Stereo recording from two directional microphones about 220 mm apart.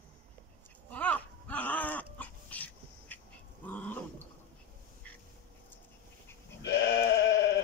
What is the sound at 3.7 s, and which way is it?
Roaring cats, 5° left (ahead or behind).